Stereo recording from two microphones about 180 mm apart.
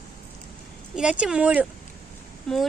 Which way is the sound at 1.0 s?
5° right (ahead or behind).